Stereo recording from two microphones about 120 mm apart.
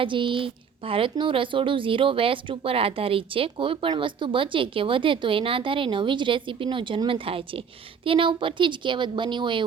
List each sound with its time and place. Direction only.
0.0 s speech: 45° right (ahead or behind)